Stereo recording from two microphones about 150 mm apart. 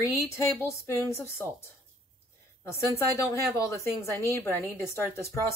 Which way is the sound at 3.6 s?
20° left (ahead or behind).